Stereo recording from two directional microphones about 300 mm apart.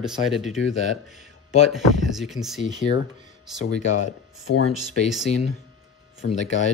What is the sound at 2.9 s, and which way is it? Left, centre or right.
Speech, centre.